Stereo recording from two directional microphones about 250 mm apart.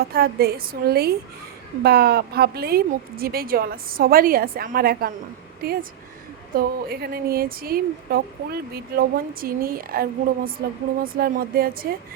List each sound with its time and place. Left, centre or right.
0.0 s speech: right
6.5 s speech: right